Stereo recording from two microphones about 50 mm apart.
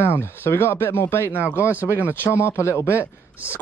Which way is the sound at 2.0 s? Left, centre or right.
Left.